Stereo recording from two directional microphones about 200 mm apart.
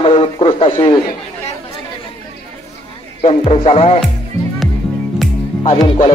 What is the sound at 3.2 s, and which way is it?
Speech, 30° left (ahead or behind).